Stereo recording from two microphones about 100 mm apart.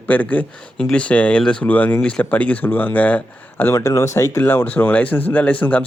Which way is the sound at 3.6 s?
25° left (ahead or behind).